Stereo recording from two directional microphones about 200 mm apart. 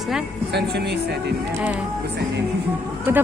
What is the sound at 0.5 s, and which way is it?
Speech, 55° right (ahead or behind).